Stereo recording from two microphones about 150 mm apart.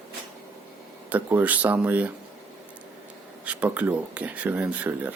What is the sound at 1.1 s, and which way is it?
Speech, 10° right (ahead or behind).